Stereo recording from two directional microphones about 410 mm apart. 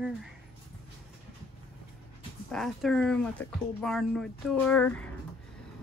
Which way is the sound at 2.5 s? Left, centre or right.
Centre.